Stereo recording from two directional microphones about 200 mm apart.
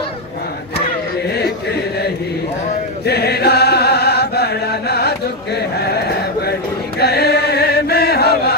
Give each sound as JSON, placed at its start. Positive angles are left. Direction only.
{"t": 1.3, "sound": "chant", "side_deg": 55}